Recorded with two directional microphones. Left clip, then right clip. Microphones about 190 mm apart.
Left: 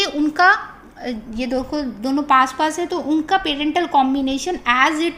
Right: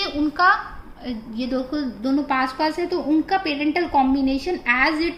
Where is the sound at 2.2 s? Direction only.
35° left (ahead or behind).